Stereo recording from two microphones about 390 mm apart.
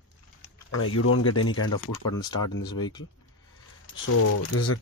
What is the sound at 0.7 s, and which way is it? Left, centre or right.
Speech, left.